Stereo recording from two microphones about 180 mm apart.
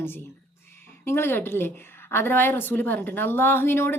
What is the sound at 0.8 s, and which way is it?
A woman's voice, 15° left (ahead or behind).